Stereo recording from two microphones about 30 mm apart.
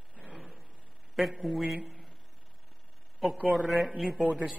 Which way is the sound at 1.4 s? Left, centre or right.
Centre.